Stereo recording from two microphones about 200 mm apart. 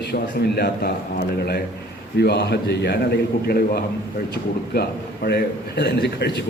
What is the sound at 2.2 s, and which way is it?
A man's voice, 55° left (ahead or behind).